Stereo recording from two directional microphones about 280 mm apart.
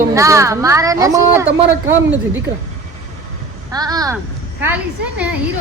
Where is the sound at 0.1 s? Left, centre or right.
Centre.